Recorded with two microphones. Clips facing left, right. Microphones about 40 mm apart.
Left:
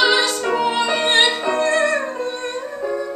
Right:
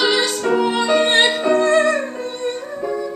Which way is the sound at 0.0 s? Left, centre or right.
Centre.